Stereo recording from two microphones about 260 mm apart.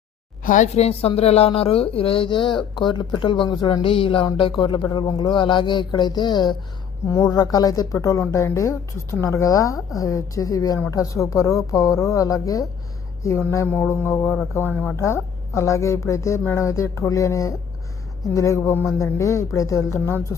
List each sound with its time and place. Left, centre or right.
0.4 s a woman's voice: left; by 20.3 s centre